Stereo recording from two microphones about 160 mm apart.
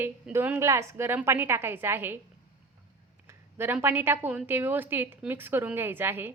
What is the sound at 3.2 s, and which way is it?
A woman's voice, 15° right (ahead or behind).